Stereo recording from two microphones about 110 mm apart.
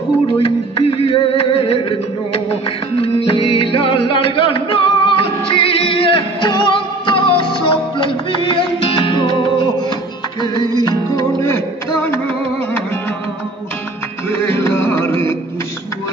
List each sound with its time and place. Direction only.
0.4 s music: 60° left (ahead or behind); by 12.2 s 25° left (ahead or behind)
14.3 s music: 20° left (ahead or behind)